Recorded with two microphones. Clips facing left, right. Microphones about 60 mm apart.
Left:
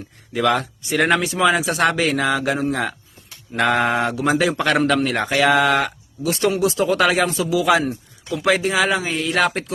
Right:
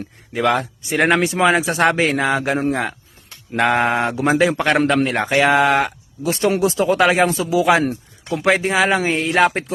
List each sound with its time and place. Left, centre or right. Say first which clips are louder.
0.3 s speech: right 1 dB; right
7.9 s speech: right 2 dB; right